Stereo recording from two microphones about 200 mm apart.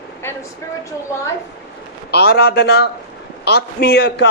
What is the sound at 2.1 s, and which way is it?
A man's voice, 50° left (ahead or behind).